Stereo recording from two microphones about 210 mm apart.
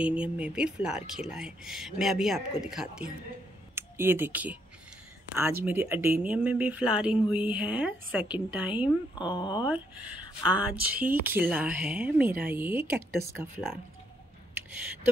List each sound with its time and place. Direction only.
0.0 s speech: 5° right (ahead or behind)
9.2 s speech: 20° left (ahead or behind)
9.7 s speech: 5° right (ahead or behind)